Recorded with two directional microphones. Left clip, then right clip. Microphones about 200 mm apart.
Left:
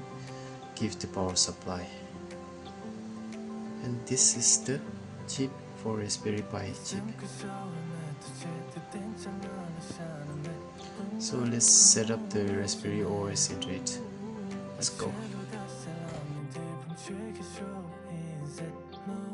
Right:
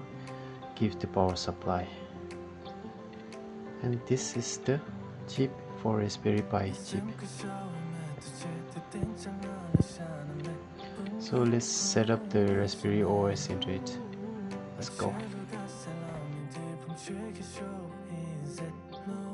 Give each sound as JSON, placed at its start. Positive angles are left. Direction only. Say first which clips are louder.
{"t": 0.7, "sound": "speech", "louder": "right 5 dB", "side_deg": -40}
{"t": 4.1, "sound": "speech", "louder": "left 9 dB", "side_deg": -40}
{"t": 7.0, "sound": "music", "louder": "even", "side_deg": 0}
{"t": 11.1, "sound": "speech", "louder": "right 3 dB", "side_deg": -40}
{"t": 15.0, "sound": "music", "louder": "right 2 dB", "side_deg": 0}
{"t": 16.6, "sound": "music", "louder": "even", "side_deg": 0}